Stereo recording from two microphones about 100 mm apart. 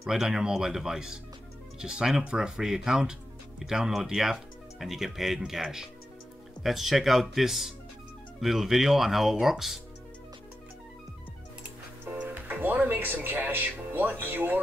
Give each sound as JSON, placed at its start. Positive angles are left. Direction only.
{"t": 0.0, "sound": "speech", "side_deg": -5}
{"t": 12.0, "sound": "speech", "side_deg": -20}